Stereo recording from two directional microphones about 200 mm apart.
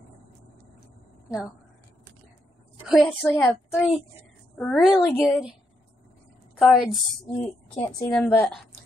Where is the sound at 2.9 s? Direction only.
5° left (ahead or behind).